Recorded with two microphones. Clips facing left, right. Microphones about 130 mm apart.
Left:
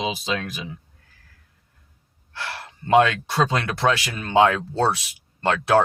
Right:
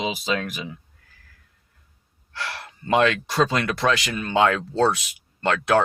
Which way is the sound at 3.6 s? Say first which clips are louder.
Even; 30° left (ahead or behind).